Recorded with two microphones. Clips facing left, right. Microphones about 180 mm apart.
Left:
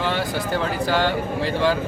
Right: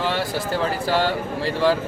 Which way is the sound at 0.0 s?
Centre (ahead or behind).